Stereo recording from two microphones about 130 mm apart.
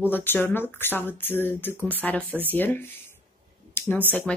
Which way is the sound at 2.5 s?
15° left (ahead or behind).